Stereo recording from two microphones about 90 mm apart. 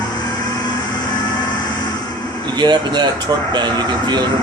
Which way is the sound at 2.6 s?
55° right (ahead or behind).